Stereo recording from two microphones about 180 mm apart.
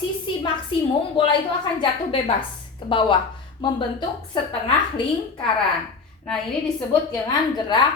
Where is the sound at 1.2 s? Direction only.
25° left (ahead or behind).